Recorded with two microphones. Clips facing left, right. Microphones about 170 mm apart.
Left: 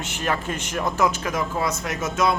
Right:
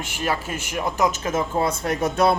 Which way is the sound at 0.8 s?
20° right (ahead or behind).